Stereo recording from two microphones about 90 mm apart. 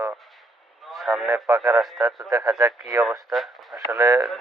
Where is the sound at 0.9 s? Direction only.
Centre (ahead or behind).